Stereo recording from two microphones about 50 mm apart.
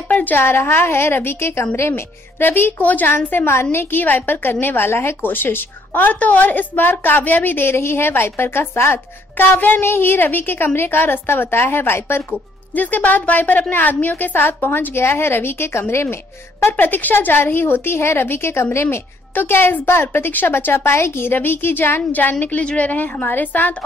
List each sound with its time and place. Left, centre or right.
0.1 s a sound: left
0.4 s a woman's voice: left
6.1 s a woman's voice: left
9.4 s a woman's voice: left
12.7 s a woman's voice: left
16.7 s a woman's voice: left
19.3 s a woman's voice: left
22.1 s a woman's voice: left